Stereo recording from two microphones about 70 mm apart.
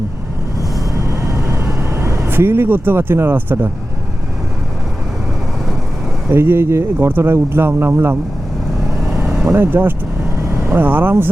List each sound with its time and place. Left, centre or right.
1.1 s vehicle: right
1.6 s speech: right
6.2 s speech: right
9.5 s speech: right